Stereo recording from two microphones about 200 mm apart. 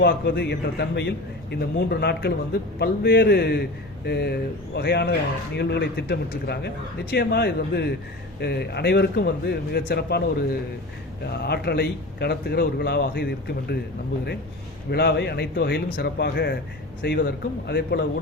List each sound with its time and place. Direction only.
0.0 s a man's voice: 55° left (ahead or behind)
11.4 s a man's voice: 55° left (ahead or behind)
14.8 s a man's voice: 55° left (ahead or behind)